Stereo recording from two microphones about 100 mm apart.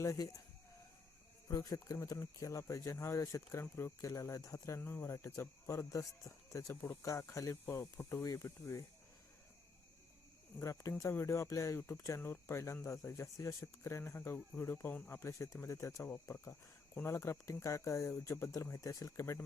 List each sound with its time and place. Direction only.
0.0 s speech: 30° left (ahead or behind)
1.5 s speech: 35° left (ahead or behind)
10.6 s speech: 30° left (ahead or behind)
15.2 s speech: 30° left (ahead or behind)